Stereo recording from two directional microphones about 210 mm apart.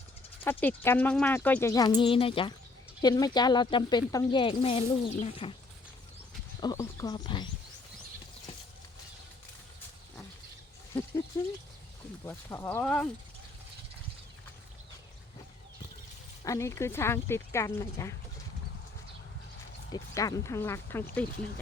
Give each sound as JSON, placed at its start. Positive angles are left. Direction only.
{"t": 0.4, "sound": "speech", "side_deg": 10}
{"t": 6.6, "sound": "speech", "side_deg": 15}
{"t": 11.3, "sound": "speech", "side_deg": 15}
{"t": 16.4, "sound": "speech", "side_deg": 15}
{"t": 19.9, "sound": "speech", "side_deg": 15}